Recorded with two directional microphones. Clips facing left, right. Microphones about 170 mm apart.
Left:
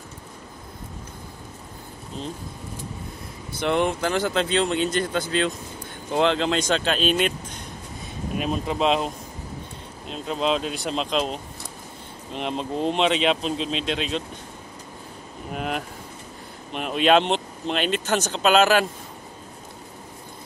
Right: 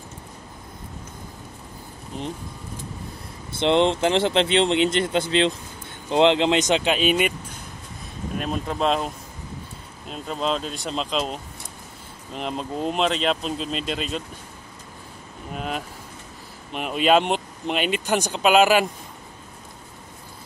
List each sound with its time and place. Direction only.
3.5 s speech: 25° right (ahead or behind)
8.4 s speech: centre (ahead or behind)
15.5 s speech: 5° left (ahead or behind)